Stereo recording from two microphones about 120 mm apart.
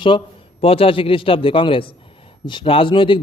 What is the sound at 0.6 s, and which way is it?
A man's voice, 50° left (ahead or behind).